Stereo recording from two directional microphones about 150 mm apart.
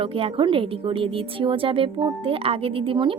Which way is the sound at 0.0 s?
40° right (ahead or behind).